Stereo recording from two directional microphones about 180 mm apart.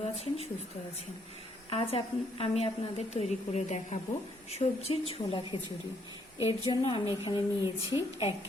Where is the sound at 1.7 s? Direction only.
30° left (ahead or behind).